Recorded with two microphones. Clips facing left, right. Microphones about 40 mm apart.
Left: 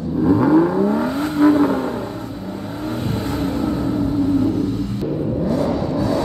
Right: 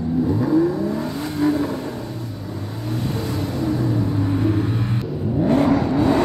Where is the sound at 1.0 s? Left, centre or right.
Left.